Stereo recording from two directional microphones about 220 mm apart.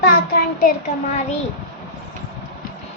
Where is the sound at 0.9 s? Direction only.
35° left (ahead or behind).